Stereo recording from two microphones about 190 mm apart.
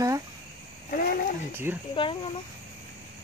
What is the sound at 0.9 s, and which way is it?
Speech, 50° left (ahead or behind).